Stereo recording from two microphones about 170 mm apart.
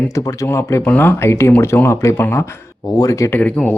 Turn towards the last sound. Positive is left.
turn(degrees=5)  # may be behind; listen again after turning